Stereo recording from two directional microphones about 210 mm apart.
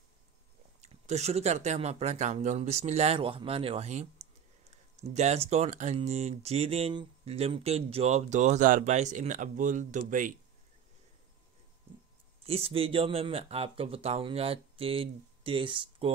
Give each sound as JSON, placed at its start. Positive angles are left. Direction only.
{"t": 0.7, "sound": "speech", "side_deg": -30}
{"t": 12.4, "sound": "speech", "side_deg": -30}